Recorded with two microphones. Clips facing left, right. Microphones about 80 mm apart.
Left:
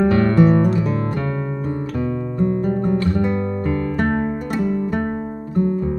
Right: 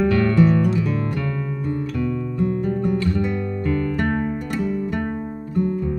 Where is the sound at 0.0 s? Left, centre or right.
Left.